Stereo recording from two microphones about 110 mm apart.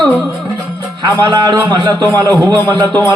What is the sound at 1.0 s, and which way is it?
A man's voice, 35° right (ahead or behind).